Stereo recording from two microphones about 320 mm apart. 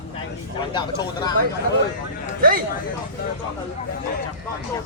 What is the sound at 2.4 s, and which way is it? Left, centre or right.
Speech, right.